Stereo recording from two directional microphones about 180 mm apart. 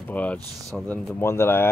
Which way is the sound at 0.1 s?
10° left (ahead or behind).